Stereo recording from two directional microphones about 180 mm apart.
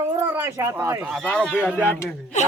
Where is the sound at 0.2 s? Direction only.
15° right (ahead or behind).